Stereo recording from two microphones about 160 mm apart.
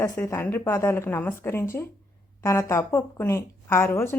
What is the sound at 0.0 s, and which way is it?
Speech, 15° left (ahead or behind).